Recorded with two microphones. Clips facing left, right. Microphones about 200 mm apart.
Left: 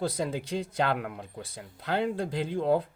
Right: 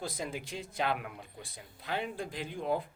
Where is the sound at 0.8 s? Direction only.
90° left.